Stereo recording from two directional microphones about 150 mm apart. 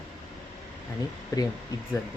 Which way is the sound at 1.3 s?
20° left (ahead or behind).